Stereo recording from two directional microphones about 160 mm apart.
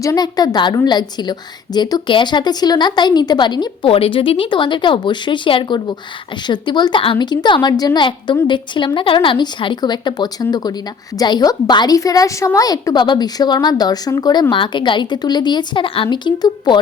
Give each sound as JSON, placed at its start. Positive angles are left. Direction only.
{"t": 0.0, "sound": "a woman's voice", "side_deg": 20}